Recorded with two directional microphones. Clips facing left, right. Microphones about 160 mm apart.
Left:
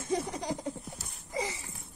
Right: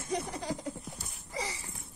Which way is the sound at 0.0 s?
25° left (ahead or behind).